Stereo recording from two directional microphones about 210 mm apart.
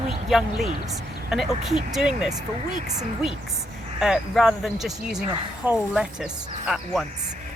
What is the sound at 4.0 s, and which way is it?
Speech, centre (ahead or behind).